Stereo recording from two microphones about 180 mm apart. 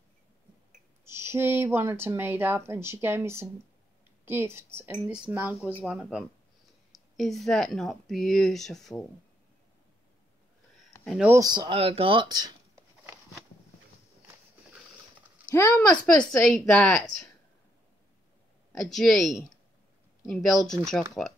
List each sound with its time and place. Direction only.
1.1 s speech: 15° right (ahead or behind); by 9.0 s centre (ahead or behind)
11.1 s speech: 5° right (ahead or behind)
11.3 s speech: 20° right (ahead or behind)
15.5 s speech: 15° left (ahead or behind)
16.1 s speech: 5° left (ahead or behind)
18.8 s speech: centre (ahead or behind)